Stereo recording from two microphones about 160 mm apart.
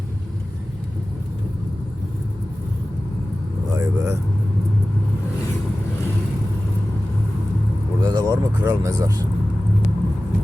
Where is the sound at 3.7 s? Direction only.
20° right (ahead or behind).